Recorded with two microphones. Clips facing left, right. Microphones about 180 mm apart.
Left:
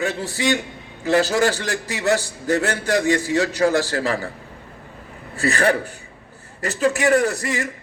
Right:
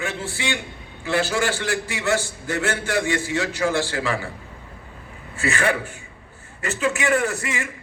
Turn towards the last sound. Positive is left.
turn(degrees=40)  # may be behind; listen again after turning